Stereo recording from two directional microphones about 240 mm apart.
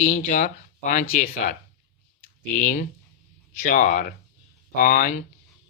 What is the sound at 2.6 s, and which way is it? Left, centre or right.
A man's voice, left.